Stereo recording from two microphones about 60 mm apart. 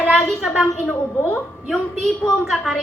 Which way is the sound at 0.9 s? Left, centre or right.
Left.